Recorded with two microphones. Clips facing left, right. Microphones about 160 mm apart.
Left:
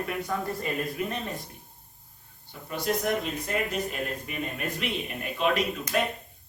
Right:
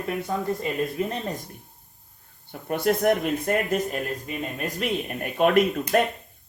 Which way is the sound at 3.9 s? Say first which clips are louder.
Right 4 dB; 40° right (ahead or behind).